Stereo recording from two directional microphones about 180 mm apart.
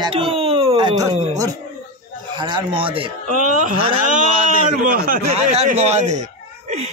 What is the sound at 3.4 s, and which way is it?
A man's voice, 45° right (ahead or behind).